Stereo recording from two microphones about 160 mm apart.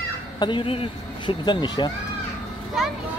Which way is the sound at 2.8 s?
Centre (ahead or behind).